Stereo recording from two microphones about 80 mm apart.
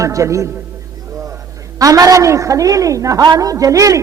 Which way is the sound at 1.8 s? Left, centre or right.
Right.